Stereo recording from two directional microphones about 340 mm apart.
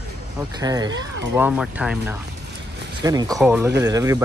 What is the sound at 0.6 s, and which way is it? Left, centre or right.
Speech, centre.